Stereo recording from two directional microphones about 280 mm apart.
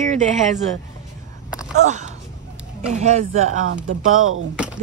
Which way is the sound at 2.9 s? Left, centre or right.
Right.